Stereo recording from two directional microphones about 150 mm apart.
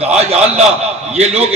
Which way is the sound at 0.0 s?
45° right (ahead or behind).